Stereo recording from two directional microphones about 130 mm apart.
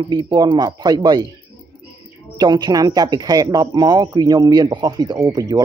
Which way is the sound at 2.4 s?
35° right (ahead or behind).